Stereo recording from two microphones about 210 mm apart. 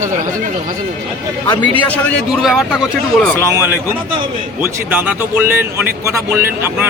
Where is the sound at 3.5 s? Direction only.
10° right (ahead or behind).